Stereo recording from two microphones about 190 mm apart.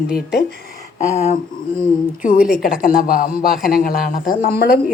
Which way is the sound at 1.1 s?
35° left (ahead or behind).